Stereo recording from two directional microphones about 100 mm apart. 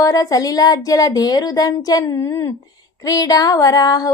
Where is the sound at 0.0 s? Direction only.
35° left (ahead or behind).